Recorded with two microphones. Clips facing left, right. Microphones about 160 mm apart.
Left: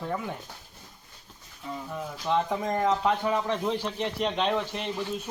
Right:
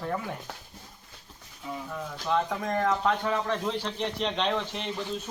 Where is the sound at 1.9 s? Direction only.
15° left (ahead or behind).